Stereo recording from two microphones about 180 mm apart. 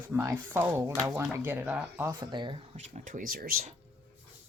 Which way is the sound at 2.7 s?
45° right (ahead or behind).